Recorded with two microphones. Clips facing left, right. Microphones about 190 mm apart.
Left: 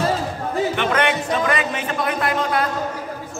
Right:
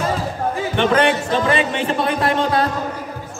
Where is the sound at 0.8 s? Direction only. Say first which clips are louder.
Right 4 dB; 30° right (ahead or behind).